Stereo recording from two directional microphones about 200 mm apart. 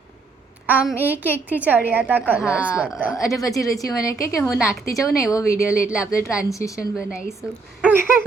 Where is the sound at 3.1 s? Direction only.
15° left (ahead or behind).